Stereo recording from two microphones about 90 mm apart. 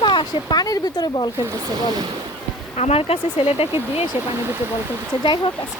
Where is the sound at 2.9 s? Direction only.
90° left.